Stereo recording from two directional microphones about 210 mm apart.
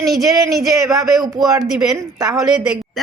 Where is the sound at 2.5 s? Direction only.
5° right (ahead or behind).